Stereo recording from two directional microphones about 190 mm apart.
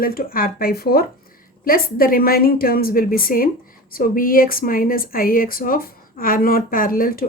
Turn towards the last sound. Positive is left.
turn(degrees=50)  # may be behind; listen again after turning